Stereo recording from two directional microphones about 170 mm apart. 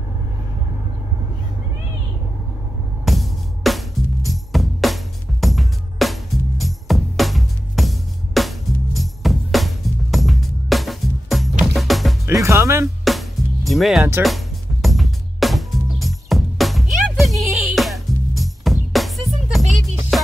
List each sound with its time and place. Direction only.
3.1 s music: centre (ahead or behind)
12.3 s music: 15° right (ahead or behind)
13.7 s speech: centre (ahead or behind)
14.2 s music: centre (ahead or behind)